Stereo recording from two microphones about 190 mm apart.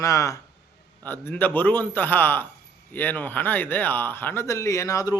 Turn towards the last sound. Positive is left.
turn(degrees=15)  # may be behind; listen again after turning